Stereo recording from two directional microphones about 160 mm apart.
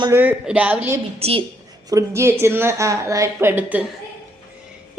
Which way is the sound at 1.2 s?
35° right (ahead or behind).